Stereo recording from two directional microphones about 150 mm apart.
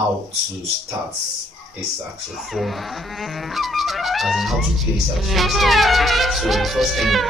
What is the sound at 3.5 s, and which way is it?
Speech, centre (ahead or behind).